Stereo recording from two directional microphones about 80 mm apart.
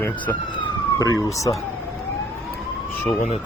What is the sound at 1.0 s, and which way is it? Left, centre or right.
Speech, left.